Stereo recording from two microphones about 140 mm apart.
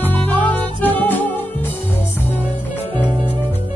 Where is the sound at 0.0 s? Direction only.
10° left (ahead or behind).